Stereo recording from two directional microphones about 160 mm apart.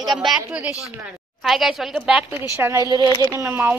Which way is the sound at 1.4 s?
Centre (ahead or behind).